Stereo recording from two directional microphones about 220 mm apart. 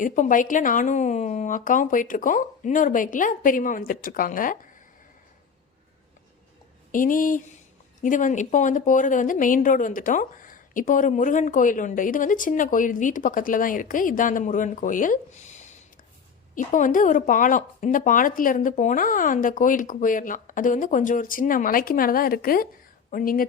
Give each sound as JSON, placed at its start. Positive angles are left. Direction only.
{"t": 0.0, "sound": "a woman's voice", "side_deg": 35}
{"t": 6.9, "sound": "a woman's voice", "side_deg": 40}
{"t": 16.6, "sound": "a woman's voice", "side_deg": 35}